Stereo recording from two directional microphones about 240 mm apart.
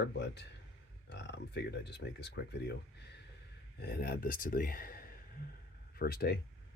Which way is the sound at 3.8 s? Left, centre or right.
Left.